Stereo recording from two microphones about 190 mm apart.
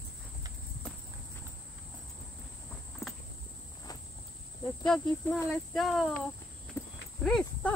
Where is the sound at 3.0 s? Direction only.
15° left (ahead or behind).